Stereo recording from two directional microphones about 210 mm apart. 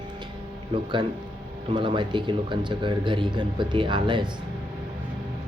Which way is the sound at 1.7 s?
25° right (ahead or behind).